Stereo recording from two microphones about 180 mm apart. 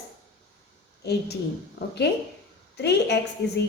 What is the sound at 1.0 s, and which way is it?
Speech, 65° left (ahead or behind).